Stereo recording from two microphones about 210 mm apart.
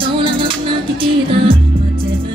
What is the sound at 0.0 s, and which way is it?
Music, 25° right (ahead or behind).